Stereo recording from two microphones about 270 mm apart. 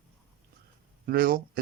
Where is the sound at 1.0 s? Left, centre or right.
Right.